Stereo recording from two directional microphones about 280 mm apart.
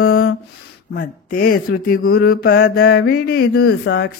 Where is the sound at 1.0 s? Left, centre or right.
Left.